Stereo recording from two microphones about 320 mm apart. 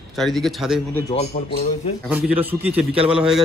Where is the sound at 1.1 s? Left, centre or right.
Centre.